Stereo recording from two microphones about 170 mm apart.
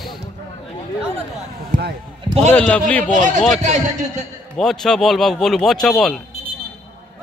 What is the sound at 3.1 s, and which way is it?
A man's voice, 50° right (ahead or behind).